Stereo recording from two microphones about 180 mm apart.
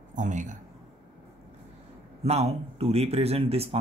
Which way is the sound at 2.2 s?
35° right (ahead or behind).